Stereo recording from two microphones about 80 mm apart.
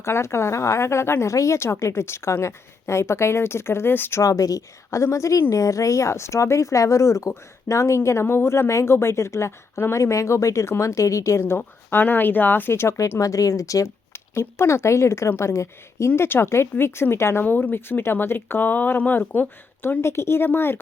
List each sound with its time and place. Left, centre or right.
0.0 s speech: left
4.2 s speech: left